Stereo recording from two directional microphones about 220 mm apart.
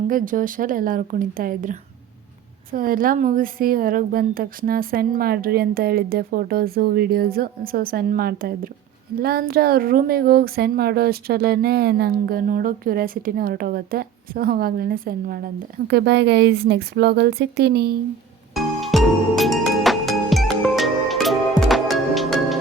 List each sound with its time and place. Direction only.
0.1 s speech: 40° right (ahead or behind)
18.5 s music: centre (ahead or behind)